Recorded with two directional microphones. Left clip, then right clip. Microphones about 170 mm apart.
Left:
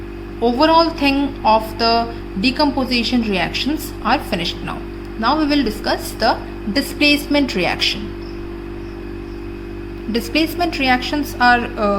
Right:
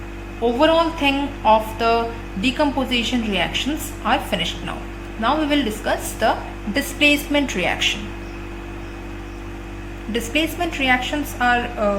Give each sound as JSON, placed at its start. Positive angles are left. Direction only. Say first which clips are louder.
{"t": 0.4, "sound": "music", "louder": "left 3 dB", "side_deg": 50}
{"t": 10.1, "sound": "music", "louder": "left 3 dB", "side_deg": 45}